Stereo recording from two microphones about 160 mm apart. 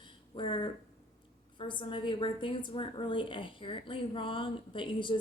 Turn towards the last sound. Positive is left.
turn(degrees=30)  # may be behind; listen again after turning